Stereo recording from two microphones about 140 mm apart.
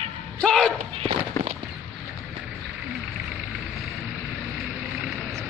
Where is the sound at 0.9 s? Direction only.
45° right (ahead or behind).